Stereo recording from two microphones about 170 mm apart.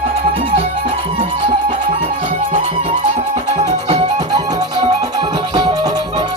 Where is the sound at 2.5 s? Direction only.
40° right (ahead or behind).